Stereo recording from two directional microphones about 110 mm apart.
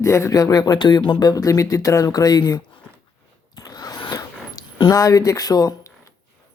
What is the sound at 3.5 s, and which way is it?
Zipper, 35° left (ahead or behind).